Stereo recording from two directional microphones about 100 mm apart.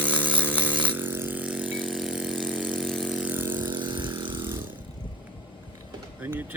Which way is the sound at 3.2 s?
20° right (ahead or behind).